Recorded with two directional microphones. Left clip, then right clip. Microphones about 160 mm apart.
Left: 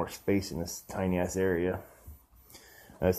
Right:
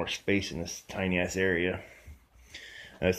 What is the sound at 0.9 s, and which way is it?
Speech, centre (ahead or behind).